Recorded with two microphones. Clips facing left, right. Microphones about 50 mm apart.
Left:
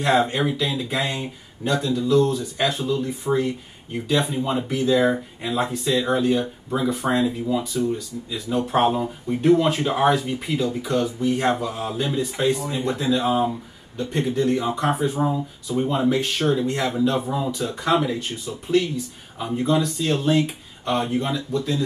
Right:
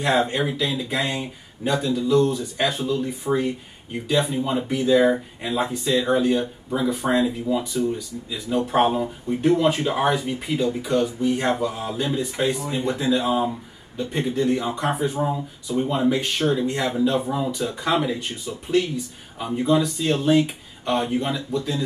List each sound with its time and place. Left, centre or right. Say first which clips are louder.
0.0 s speech: left 1 dB; centre
3.3 s speech: left 1 dB; left
4.4 s speech: even; centre